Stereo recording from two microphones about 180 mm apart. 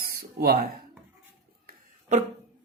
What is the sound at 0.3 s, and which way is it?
Speech, 60° right (ahead or behind).